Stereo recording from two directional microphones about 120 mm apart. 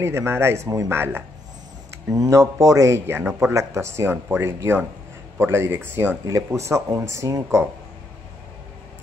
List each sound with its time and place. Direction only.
0.0 s a man's voice: 20° right (ahead or behind)